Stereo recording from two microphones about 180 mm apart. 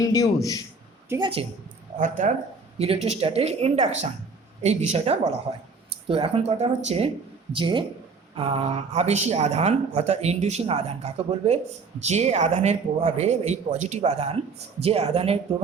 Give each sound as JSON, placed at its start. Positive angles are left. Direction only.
{"t": 0.0, "sound": "a man's voice", "side_deg": 20}
{"t": 1.1, "sound": "a woman's voice", "side_deg": -15}
{"t": 2.0, "sound": "speech", "side_deg": -45}
{"t": 2.7, "sound": "speech", "side_deg": -35}